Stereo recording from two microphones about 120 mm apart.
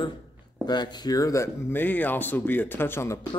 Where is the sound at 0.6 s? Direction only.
35° left (ahead or behind); by 3.1 s 20° left (ahead or behind).